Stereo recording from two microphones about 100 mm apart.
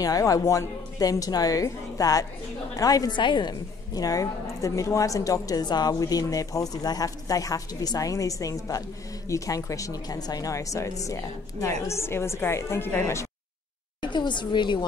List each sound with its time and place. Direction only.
0.0 s a woman's voice: 35° left (ahead or behind)
3.2 s a woman's voice: 50° left (ahead or behind); by 13.3 s 25° left (ahead or behind)
14.0 s a woman's voice: 50° left (ahead or behind)